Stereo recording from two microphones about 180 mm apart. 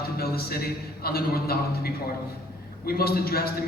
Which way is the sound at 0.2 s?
60° left (ahead or behind).